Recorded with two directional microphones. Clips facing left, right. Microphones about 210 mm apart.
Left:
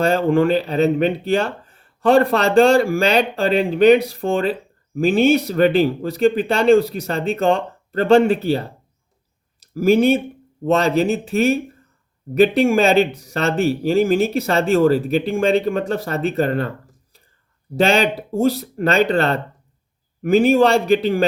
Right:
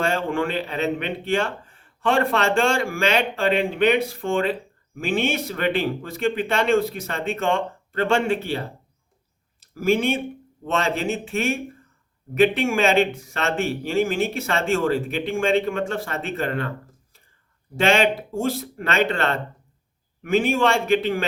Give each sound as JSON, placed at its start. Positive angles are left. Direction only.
{"t": 0.0, "sound": "speech", "side_deg": 40}
{"t": 17.7, "sound": "speech", "side_deg": 35}